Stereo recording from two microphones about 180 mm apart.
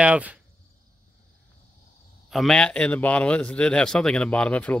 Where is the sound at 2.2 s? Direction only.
Centre (ahead or behind).